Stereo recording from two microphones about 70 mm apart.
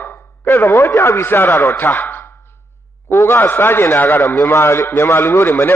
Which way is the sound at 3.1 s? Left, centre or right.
Left.